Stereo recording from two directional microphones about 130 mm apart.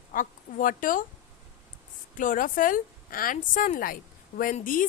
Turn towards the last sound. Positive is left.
turn(degrees=90)